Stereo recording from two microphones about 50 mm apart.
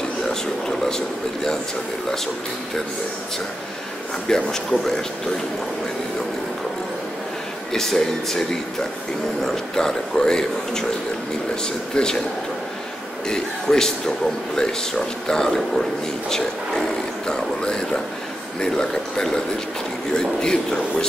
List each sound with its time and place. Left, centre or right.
0.3 s a man's voice: centre
4.3 s a man's voice: centre
7.7 s a man's voice: centre
13.3 s a man's voice: centre